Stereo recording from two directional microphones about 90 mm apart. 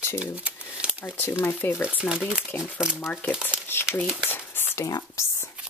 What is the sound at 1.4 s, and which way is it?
Speech, 25° left (ahead or behind).